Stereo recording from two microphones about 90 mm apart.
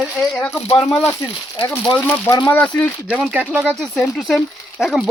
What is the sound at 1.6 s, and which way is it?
Speech, 25° left (ahead or behind).